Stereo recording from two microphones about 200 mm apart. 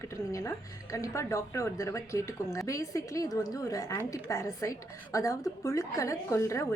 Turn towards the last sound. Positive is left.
turn(degrees=15)  # may be behind; listen again after turning